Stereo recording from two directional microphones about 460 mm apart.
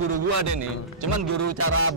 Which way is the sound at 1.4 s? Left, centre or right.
Right.